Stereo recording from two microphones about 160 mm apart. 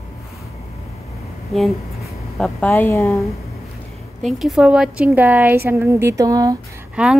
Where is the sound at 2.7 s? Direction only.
15° left (ahead or behind).